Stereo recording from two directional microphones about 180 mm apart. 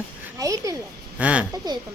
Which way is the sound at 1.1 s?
5° right (ahead or behind).